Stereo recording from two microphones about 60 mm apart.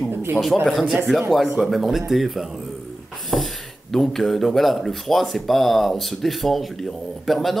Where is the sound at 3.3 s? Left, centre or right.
Centre.